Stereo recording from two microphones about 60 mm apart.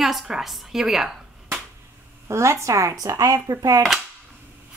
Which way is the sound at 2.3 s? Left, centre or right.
Right.